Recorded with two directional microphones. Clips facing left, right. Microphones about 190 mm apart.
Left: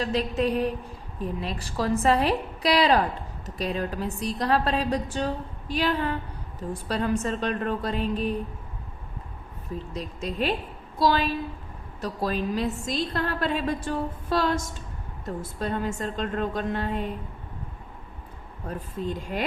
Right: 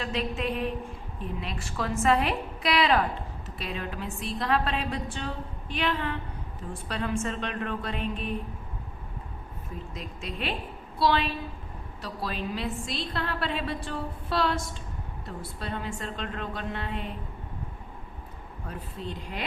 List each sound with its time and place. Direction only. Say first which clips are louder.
0.0 s a woman's voice: left 5 dB; 40° left (ahead or behind)
9.9 s a woman's voice: left 6 dB; 40° left (ahead or behind)
18.7 s a woman's voice: left 6 dB; 45° left (ahead or behind)